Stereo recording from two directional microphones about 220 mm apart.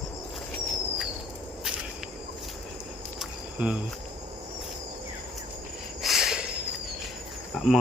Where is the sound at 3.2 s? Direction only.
5° right (ahead or behind).